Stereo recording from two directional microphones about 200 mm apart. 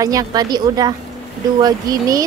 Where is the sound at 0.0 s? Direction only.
15° right (ahead or behind).